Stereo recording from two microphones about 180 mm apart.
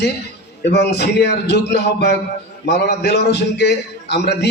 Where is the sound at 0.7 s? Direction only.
70° left (ahead or behind).